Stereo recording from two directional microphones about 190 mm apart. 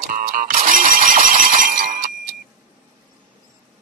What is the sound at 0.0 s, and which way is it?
Alarm, 45° right (ahead or behind).